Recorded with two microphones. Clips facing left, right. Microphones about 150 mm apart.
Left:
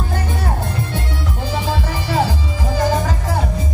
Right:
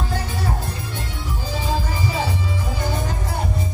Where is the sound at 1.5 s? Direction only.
85° left.